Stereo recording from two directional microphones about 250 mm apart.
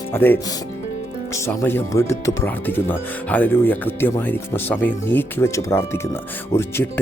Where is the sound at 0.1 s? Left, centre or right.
Centre.